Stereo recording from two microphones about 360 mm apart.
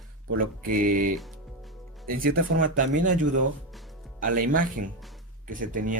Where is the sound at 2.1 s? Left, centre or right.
Right.